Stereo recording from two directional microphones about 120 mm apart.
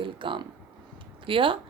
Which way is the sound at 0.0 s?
45° right (ahead or behind).